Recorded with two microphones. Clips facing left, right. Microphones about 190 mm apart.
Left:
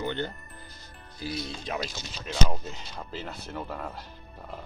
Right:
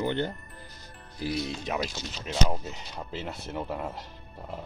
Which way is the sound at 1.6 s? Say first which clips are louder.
Right 2 dB; 10° right (ahead or behind).